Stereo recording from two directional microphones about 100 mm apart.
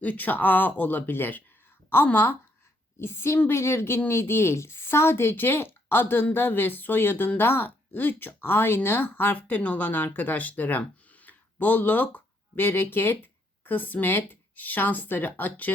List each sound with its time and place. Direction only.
0.0 s speech: 15° left (ahead or behind)